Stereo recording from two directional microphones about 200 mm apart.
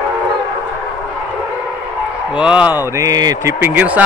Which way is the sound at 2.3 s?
5° right (ahead or behind).